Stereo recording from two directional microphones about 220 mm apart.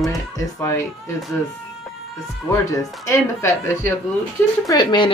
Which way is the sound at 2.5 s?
15° left (ahead or behind).